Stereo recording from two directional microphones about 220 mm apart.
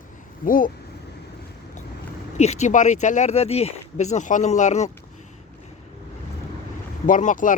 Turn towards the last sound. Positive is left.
turn(degrees=35)  # may be behind; listen again after turning